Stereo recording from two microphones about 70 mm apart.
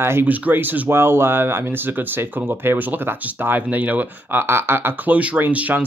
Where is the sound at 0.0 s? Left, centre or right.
Right.